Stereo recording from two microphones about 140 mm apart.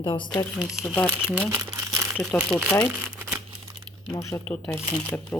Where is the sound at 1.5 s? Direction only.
20° right (ahead or behind).